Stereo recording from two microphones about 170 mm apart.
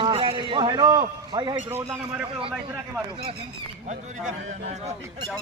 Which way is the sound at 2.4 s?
30° right (ahead or behind).